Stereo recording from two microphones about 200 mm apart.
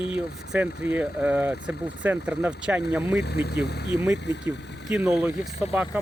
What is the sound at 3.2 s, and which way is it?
Speech, 55° left (ahead or behind).